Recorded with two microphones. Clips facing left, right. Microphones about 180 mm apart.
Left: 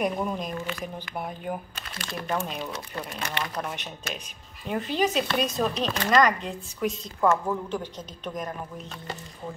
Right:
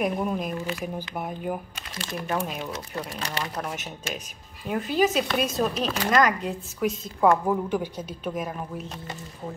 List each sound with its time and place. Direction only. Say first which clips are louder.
0.0 s speech: right 1 dB; 5° right (ahead or behind)
3.2 s speech: left 2 dB; 35° right (ahead or behind)
3.5 s a woman's voice: right 1 dB; 5° right (ahead or behind)